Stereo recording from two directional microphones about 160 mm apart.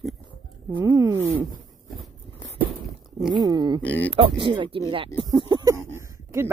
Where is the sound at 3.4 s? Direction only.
25° right (ahead or behind).